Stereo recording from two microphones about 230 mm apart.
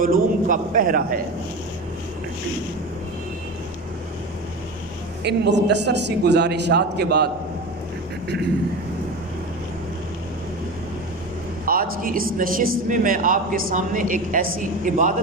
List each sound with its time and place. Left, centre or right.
0.0 s speech: right
5.2 s a man's voice: right
11.6 s speech: right